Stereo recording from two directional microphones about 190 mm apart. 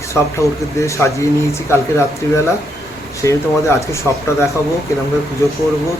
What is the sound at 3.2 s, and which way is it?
Speech, 15° left (ahead or behind).